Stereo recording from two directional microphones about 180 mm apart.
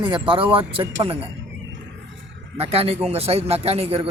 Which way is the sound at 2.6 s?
35° right (ahead or behind).